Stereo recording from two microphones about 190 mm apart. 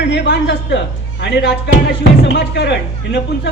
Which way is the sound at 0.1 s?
65° left (ahead or behind).